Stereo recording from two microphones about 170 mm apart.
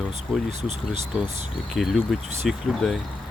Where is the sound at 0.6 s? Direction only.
40° right (ahead or behind).